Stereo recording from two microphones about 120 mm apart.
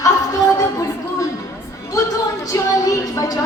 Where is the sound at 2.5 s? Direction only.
30° left (ahead or behind).